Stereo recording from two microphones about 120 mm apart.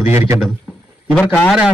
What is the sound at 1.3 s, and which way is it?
Speech, 5° left (ahead or behind).